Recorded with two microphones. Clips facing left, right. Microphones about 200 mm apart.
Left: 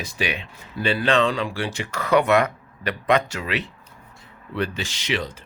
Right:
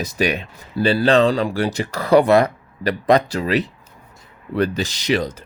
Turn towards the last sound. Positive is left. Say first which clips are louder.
# right 7 dB
turn(degrees=-40)  # may be behind; listen again after turning